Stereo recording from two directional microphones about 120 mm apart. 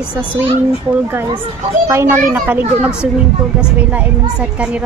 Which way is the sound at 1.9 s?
25° right (ahead or behind).